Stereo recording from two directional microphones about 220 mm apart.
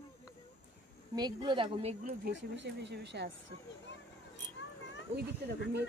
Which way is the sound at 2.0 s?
50° right (ahead or behind).